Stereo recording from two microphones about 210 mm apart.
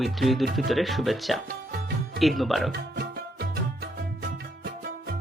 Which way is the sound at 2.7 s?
50° right (ahead or behind).